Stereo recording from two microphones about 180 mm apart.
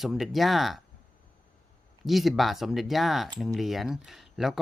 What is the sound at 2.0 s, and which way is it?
Speech, centre (ahead or behind).